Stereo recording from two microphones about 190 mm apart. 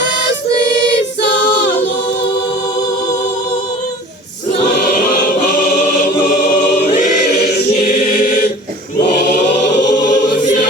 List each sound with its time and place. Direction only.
4.9 s choir: 50° left (ahead or behind)
7.3 s choir: 60° left (ahead or behind)
9.2 s choir: 40° left (ahead or behind)